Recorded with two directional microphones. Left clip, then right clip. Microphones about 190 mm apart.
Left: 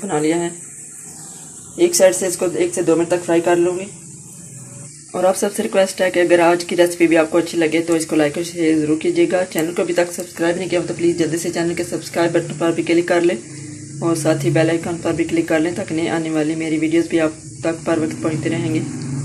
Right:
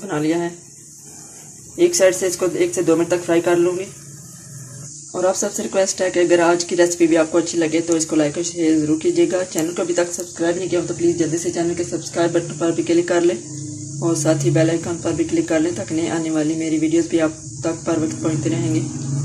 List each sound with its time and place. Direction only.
0.0 s speech: 15° left (ahead or behind)
1.8 s speech: 10° left (ahead or behind)
5.1 s speech: 5° left (ahead or behind)